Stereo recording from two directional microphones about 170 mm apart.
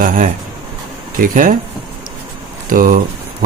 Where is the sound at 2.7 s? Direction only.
55° right (ahead or behind).